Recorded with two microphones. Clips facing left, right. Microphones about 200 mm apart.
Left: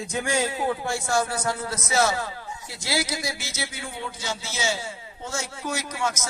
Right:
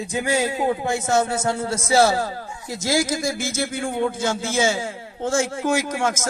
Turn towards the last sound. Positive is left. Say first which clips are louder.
# right 6 dB
turn(degrees=-50)  # may be behind; listen again after turning